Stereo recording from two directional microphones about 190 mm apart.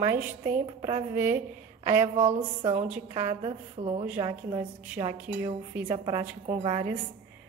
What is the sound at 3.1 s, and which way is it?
Speech, 30° right (ahead or behind).